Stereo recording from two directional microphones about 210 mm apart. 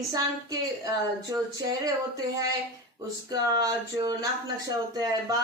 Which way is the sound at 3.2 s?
15° right (ahead or behind).